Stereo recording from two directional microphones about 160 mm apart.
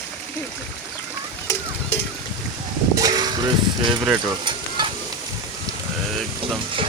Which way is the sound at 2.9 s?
25° right (ahead or behind).